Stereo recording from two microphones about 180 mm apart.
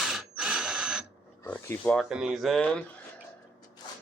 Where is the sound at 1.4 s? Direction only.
10° left (ahead or behind).